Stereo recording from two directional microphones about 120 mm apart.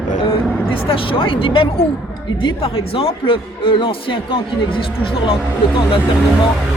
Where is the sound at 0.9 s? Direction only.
45° left (ahead or behind).